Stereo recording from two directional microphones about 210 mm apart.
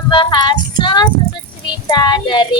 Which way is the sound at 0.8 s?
20° left (ahead or behind).